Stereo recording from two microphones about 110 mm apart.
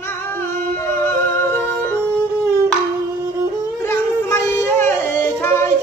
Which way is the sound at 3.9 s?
20° left (ahead or behind).